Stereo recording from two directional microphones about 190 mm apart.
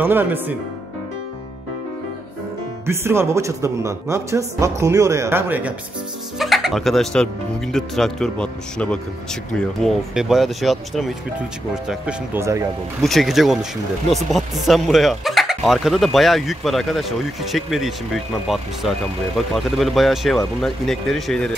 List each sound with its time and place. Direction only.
0.0 s speech: 10° right (ahead or behind)
2.9 s speech: 15° right (ahead or behind)
13.0 s speech: centre (ahead or behind)